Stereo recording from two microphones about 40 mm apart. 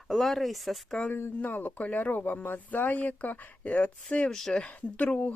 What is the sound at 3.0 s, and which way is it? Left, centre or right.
Speech, left.